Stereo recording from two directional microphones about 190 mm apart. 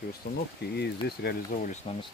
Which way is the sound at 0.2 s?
55° left (ahead or behind).